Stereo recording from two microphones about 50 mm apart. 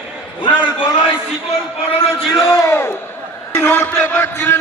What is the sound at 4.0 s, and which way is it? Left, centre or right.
Speech, left.